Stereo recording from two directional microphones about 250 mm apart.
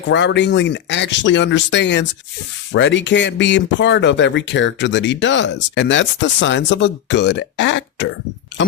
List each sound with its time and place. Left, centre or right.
0.1 s speech: left